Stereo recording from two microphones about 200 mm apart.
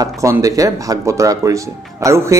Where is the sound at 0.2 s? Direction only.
15° right (ahead or behind).